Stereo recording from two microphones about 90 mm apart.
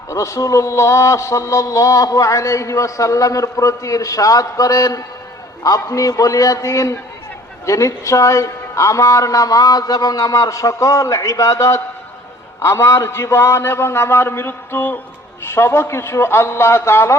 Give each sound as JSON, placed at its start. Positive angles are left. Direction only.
{"t": 0.1, "sound": "a man's voice", "side_deg": 35}